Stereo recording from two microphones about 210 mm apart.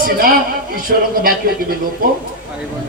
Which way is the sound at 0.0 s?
40° right (ahead or behind).